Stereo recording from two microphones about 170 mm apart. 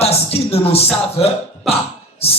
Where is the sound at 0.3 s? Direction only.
35° left (ahead or behind).